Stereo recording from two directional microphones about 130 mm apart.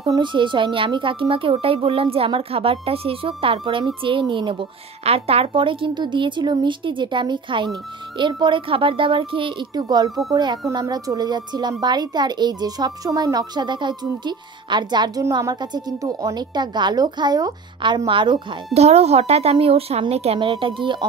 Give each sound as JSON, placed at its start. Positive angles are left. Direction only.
{"t": 0.1, "sound": "a woman's voice", "side_deg": -35}
{"t": 18.7, "sound": "a woman's voice", "side_deg": -55}